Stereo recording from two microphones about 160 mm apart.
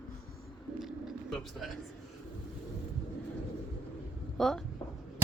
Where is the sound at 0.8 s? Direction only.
Centre (ahead or behind).